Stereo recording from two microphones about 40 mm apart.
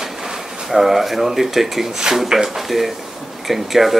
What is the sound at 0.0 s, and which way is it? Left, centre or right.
Speech, centre.